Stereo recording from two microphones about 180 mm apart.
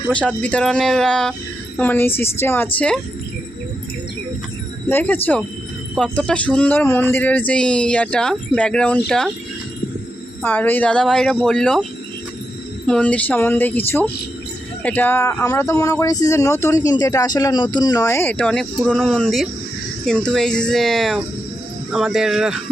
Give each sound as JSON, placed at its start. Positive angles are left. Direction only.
{"t": 0.1, "sound": "speech", "side_deg": 5}
{"t": 4.9, "sound": "speech", "side_deg": 10}
{"t": 10.4, "sound": "speech", "side_deg": 10}